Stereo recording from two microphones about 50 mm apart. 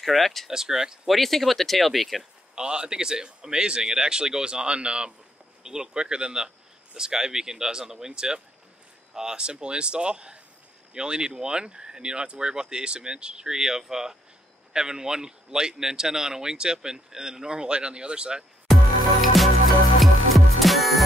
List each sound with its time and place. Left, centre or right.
0.0 s speech: centre
0.5 s speech: centre
1.0 s speech: centre
2.5 s speech: centre
18.7 s music: centre